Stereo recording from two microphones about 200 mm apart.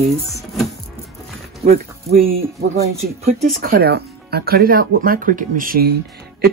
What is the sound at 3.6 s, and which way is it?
Speech, 50° right (ahead or behind).